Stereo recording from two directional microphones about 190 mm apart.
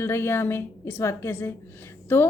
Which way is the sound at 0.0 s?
15° left (ahead or behind).